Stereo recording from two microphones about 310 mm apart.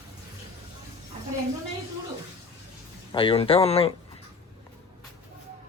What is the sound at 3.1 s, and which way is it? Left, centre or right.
Speech, centre.